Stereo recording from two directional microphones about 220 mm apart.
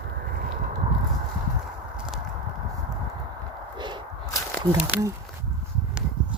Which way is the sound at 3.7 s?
20° right (ahead or behind).